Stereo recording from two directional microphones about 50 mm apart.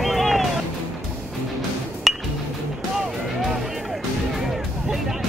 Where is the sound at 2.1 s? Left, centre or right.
Centre.